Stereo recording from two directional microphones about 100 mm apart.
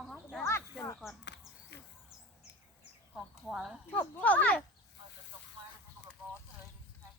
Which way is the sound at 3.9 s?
15° left (ahead or behind).